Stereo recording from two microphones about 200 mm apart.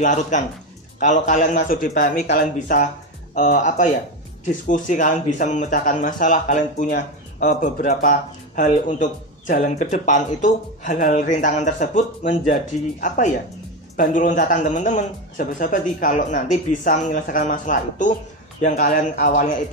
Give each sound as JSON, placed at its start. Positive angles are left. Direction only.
{"t": 0.0, "sound": "speech", "side_deg": 40}